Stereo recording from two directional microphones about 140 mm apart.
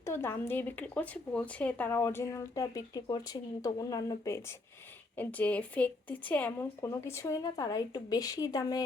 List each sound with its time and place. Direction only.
0.0 s speech: 15° left (ahead or behind)
5.1 s speech: 10° left (ahead or behind)
6.8 s speech: 25° left (ahead or behind)